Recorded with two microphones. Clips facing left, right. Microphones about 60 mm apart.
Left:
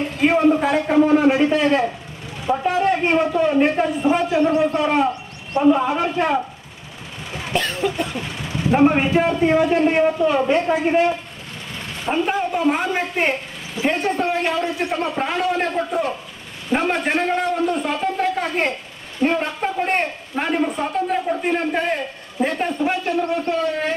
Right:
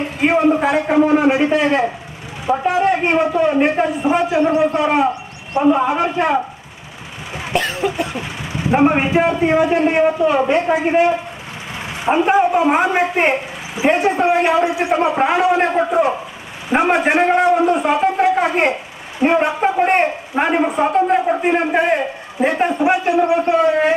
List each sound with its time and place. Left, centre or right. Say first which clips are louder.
0.0 s a sound: right 1 dB; right
0.7 s a man's voice: right 2 dB; right
7.3 s cough: right 3 dB; centre
7.8 s a man's voice: right 2 dB; centre
13.7 s a man's voice: right 5 dB; centre